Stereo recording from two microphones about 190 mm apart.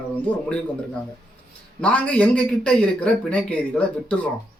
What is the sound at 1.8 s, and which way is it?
A man's voice, 5° left (ahead or behind).